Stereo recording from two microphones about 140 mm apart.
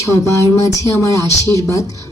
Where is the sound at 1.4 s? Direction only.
20° left (ahead or behind).